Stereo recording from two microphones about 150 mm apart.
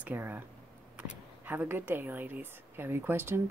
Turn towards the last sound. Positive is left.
turn(degrees=-15)  # may be behind; listen again after turning